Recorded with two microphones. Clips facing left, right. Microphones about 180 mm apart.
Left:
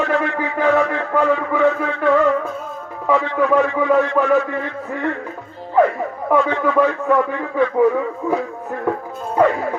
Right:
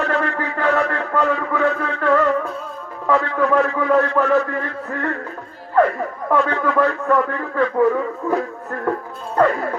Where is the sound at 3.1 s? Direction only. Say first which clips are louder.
Left 1 dB; 10° left (ahead or behind).